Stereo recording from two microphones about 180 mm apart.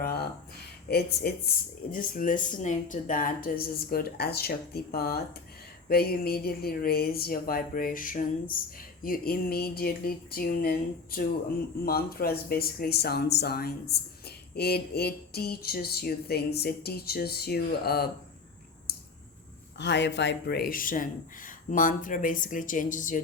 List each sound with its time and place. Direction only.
0.0 s a sound: 60° left (ahead or behind)
0.9 s speech: 60° left (ahead or behind)
1.9 s speech: 45° left (ahead or behind)
19.8 s speech: 75° left (ahead or behind); by 23.2 s 45° left (ahead or behind)